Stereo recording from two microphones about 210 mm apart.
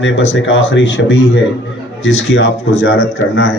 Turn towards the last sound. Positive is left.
turn(degrees=65)  # may be behind; listen again after turning